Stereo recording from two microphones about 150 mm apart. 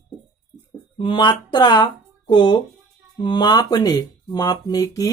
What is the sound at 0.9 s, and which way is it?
A woman's voice, 35° left (ahead or behind).